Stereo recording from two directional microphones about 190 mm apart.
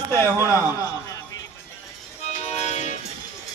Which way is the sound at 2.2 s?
35° left (ahead or behind).